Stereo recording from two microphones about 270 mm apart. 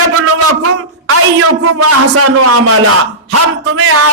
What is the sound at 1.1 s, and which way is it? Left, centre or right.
A man's voice, right.